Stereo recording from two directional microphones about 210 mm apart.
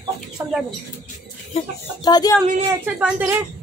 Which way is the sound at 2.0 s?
20° left (ahead or behind).